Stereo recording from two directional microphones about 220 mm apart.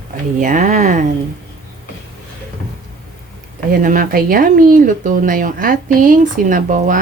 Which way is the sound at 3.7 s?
40° right (ahead or behind).